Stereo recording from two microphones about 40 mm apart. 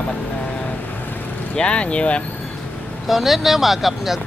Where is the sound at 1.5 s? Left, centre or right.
Left.